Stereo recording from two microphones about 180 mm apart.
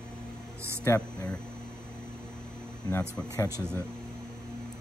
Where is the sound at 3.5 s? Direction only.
15° right (ahead or behind).